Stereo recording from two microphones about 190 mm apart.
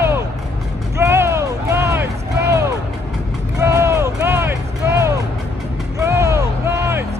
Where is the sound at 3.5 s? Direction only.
15° right (ahead or behind).